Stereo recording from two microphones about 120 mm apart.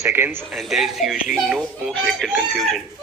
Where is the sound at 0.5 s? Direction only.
Centre (ahead or behind).